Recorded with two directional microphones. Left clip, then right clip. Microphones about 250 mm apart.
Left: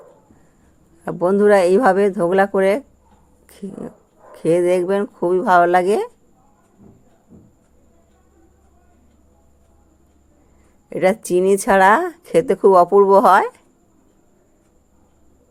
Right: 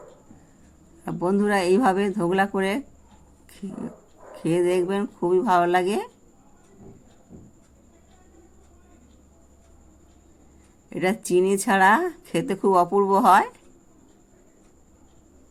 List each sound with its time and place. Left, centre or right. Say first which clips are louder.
1.0 s speech: left 9 dB; left
4.4 s speech: left 6 dB; left
10.8 s speech: left 8 dB; left